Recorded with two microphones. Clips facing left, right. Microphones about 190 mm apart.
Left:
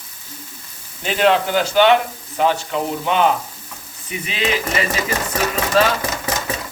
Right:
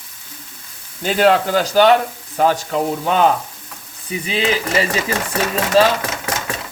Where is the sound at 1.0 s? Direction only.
40° right (ahead or behind).